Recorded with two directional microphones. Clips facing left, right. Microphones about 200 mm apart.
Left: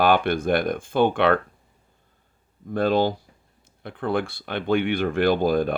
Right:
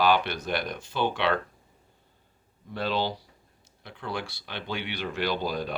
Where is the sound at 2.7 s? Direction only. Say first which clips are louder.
Left 8 dB; 50° left (ahead or behind).